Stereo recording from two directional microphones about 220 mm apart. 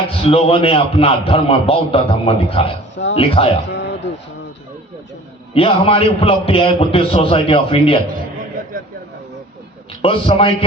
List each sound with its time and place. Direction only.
0.2 s a man's voice: 25° left (ahead or behind)
2.9 s speech: 55° left (ahead or behind)
3.2 s a man's voice: 25° left (ahead or behind)
3.7 s a sound: 55° left (ahead or behind)
5.5 s a man's voice: 25° left (ahead or behind)
10.0 s a man's voice: 25° left (ahead or behind)